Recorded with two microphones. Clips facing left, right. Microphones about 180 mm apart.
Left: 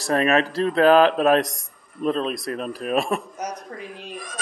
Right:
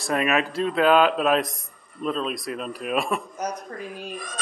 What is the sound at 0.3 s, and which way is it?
Speech, 35° left (ahead or behind).